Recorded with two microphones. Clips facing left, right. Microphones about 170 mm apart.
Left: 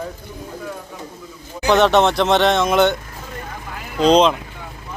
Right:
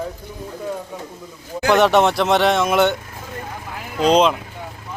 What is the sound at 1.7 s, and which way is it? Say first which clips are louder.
Speech: even; 10° right (ahead or behind).